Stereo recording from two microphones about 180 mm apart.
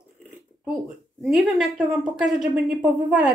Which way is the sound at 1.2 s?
Centre (ahead or behind).